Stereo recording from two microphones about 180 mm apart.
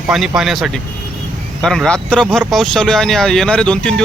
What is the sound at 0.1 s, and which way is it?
Speech, 5° right (ahead or behind).